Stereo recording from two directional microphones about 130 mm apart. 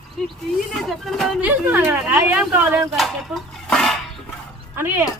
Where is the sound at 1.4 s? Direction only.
15° right (ahead or behind).